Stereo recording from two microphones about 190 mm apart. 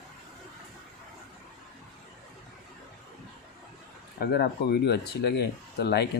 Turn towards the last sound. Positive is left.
turn(degrees=60)  # may be behind; listen again after turning